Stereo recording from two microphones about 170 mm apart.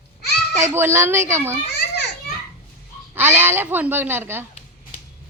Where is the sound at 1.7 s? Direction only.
80° left.